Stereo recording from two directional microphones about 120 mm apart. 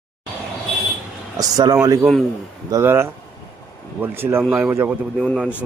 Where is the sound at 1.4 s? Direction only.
30° right (ahead or behind).